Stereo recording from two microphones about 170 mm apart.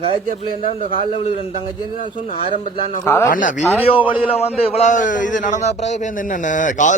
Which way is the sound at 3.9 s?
30° left (ahead or behind).